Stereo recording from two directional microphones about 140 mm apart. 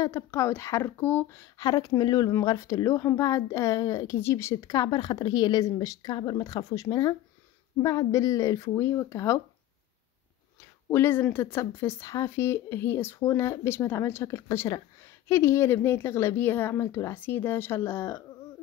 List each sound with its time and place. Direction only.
0.0 s speech: 20° left (ahead or behind)
10.9 s speech: 15° left (ahead or behind)